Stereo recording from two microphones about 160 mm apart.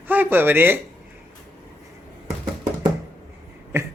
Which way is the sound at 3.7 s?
15° right (ahead or behind).